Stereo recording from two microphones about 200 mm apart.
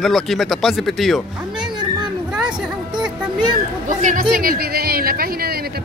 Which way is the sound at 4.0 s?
40° right (ahead or behind).